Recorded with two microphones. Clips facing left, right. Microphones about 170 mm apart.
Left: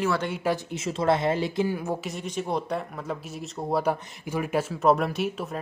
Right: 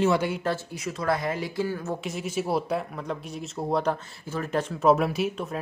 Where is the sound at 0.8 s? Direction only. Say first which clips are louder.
Left 3 dB; 25° left (ahead or behind).